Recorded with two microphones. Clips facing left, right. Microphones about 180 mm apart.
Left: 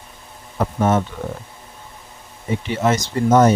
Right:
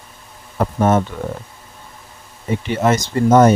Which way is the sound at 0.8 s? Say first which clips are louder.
Right 2 dB; 50° right (ahead or behind).